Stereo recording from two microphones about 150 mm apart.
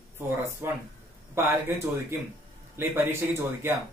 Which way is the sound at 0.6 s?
15° right (ahead or behind).